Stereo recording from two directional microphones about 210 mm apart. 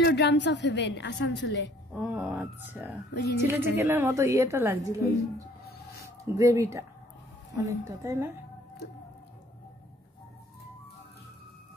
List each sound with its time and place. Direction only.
0.0 s a woman's voice: 55° left (ahead or behind)
2.0 s a woman's voice: 5° right (ahead or behind)
6.2 s a woman's voice: 15° right (ahead or behind)